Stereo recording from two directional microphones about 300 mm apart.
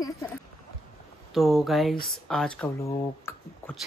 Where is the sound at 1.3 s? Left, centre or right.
Centre.